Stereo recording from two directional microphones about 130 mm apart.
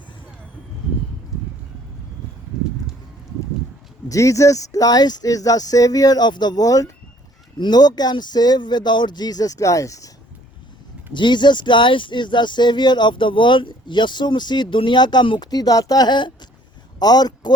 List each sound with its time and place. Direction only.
4.1 s speech: 25° left (ahead or behind)
11.1 s speech: 35° left (ahead or behind)